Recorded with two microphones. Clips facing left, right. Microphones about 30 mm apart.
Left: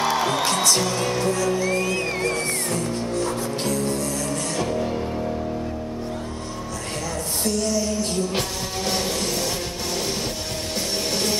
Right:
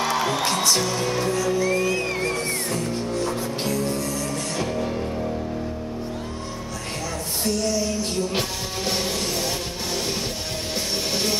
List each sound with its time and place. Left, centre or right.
0.0 s music: centre
1.7 s music: centre
7.4 s music: centre
8.3 s music: centre